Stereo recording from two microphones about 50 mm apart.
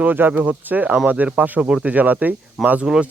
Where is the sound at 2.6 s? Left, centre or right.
Centre.